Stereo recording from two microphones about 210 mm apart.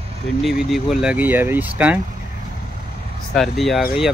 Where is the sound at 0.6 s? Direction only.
Centre (ahead or behind).